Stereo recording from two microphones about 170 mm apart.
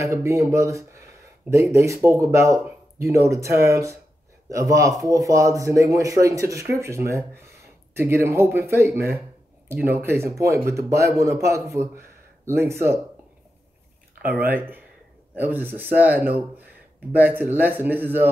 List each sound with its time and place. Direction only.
0.0 s speech: 15° right (ahead or behind)
14.2 s speech: 10° right (ahead or behind)